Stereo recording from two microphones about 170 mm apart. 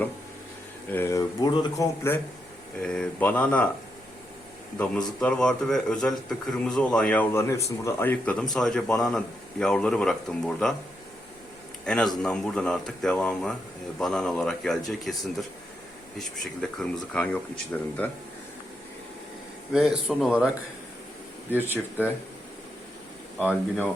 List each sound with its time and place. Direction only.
0.9 s speech: 15° left (ahead or behind)
2.8 s speech: 5° left (ahead or behind)
4.8 s speech: 5° left (ahead or behind)
11.9 s speech: 5° left (ahead or behind)
19.7 s speech: 5° right (ahead or behind)
23.4 s speech: 5° right (ahead or behind)